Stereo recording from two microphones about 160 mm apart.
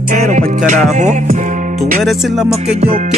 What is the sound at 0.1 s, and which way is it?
Music, 50° right (ahead or behind).